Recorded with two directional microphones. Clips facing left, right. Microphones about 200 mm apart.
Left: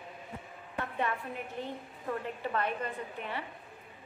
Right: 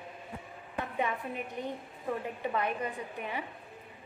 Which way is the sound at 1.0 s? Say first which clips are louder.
Right 1 dB; 15° right (ahead or behind).